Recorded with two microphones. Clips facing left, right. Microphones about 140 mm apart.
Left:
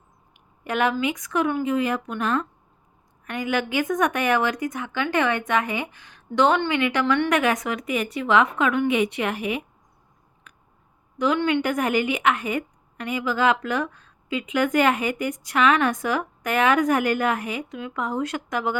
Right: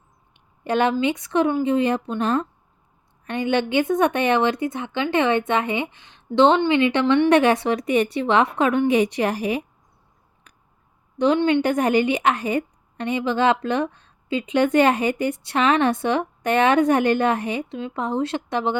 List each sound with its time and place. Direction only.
0.3 s a woman's voice: 30° right (ahead or behind)
10.5 s scissors: 35° right (ahead or behind)
11.3 s speech: 20° right (ahead or behind)
11.6 s a woman's voice: 35° right (ahead or behind)